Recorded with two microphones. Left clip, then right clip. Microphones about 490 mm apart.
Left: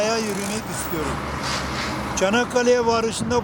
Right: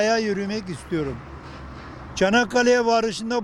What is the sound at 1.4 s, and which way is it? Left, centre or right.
Speech, right.